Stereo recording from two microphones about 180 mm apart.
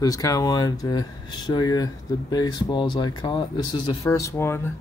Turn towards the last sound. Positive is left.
turn(degrees=10)  # may be behind; listen again after turning